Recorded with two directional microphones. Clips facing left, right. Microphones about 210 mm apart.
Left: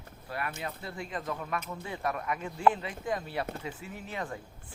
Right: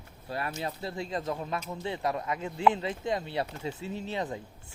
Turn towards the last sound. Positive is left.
turn(degrees=-25)  # may be behind; listen again after turning